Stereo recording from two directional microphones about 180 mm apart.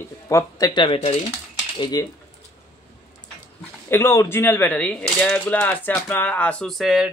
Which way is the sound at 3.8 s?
15° left (ahead or behind).